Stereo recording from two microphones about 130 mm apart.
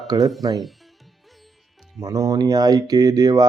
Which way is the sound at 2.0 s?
25° right (ahead or behind).